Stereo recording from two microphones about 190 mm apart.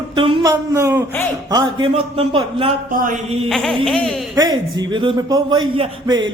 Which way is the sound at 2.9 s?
45° right (ahead or behind).